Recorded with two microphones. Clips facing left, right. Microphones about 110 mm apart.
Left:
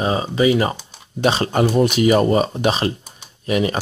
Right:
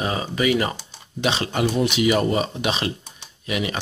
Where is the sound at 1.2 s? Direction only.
40° left (ahead or behind).